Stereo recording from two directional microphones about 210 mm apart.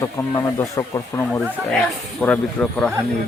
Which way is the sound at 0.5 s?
15° left (ahead or behind).